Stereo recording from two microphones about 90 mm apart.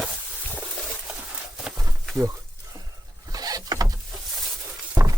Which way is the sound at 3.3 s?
45° right (ahead or behind).